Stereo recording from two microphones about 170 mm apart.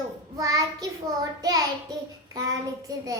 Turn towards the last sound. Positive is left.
turn(degrees=-20)  # may be behind; listen again after turning